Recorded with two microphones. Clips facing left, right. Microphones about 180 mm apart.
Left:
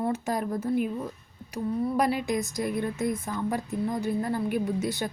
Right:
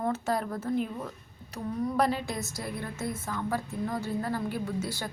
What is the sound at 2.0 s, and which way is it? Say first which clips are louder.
A woman's voice: left 1 dB; 15° left (ahead or behind).